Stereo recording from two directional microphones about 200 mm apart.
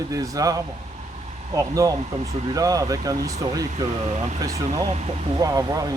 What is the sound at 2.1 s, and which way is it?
Speech, 35° right (ahead or behind).